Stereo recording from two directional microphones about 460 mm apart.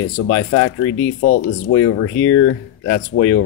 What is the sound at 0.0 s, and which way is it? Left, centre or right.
Speech, left.